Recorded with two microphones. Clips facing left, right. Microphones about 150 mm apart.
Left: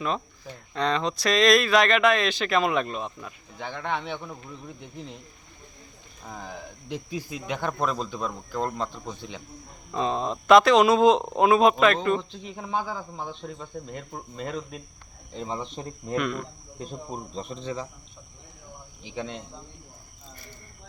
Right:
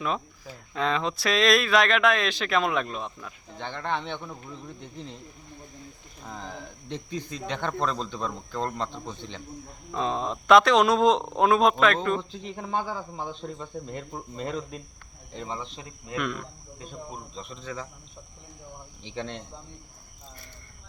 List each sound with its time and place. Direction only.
0.0 s speech: 5° right (ahead or behind)
6.2 s speech: 5° left (ahead or behind)
15.4 s speech: 15° left (ahead or behind)
15.6 s speech: 40° left (ahead or behind)
16.1 s speech: centre (ahead or behind)
16.9 s speech: 35° left (ahead or behind)
17.6 s speech: 25° left (ahead or behind)
19.0 s speech: 5° left (ahead or behind)